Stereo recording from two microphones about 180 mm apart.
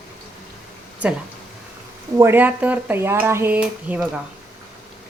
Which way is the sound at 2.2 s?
10° right (ahead or behind).